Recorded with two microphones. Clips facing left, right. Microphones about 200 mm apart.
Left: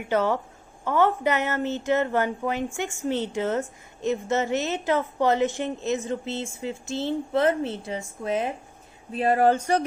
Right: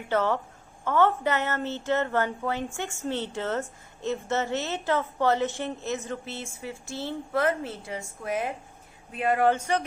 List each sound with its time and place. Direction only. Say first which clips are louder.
0.1 s speech: left 2 dB; 15° left (ahead or behind)
9.1 s speech: left 3 dB; 35° left (ahead or behind)